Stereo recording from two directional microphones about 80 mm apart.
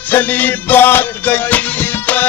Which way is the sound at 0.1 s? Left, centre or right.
Left.